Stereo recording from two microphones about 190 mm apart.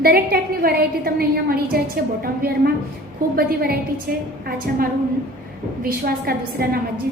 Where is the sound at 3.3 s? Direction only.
50° right (ahead or behind).